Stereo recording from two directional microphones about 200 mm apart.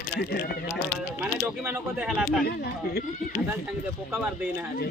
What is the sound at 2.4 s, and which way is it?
Speech, 55° left (ahead or behind).